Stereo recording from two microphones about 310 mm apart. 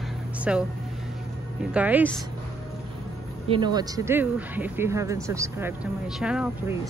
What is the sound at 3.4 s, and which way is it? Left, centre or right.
Speech, centre.